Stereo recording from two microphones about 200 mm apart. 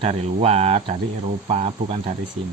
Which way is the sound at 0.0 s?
30° right (ahead or behind).